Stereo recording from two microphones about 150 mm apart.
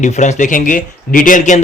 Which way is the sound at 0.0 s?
55° left (ahead or behind).